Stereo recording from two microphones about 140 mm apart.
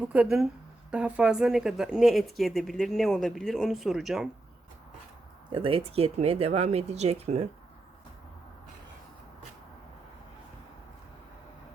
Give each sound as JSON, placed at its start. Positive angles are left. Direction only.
{"t": 0.0, "sound": "a woman's voice", "side_deg": -10}
{"t": 5.5, "sound": "speech", "side_deg": -40}